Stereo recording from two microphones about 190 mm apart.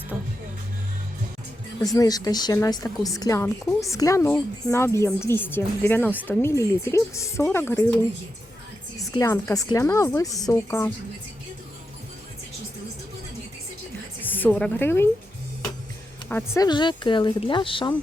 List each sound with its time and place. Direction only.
0.1 s music: 10° right (ahead or behind)
1.8 s a woman's voice: 20° left (ahead or behind)
9.0 s speech: 15° left (ahead or behind)
14.2 s a woman's voice: 10° left (ahead or behind)
16.3 s a woman's voice: 20° left (ahead or behind)